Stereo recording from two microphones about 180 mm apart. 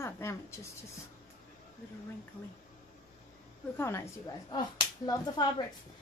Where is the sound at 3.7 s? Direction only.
15° left (ahead or behind).